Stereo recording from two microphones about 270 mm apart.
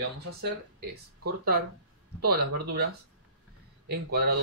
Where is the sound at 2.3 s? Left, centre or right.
Right.